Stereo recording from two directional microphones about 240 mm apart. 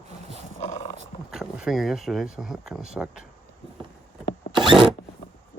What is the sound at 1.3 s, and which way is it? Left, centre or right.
Speech, centre.